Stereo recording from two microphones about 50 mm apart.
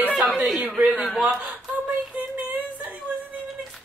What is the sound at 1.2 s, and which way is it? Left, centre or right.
Speech, right.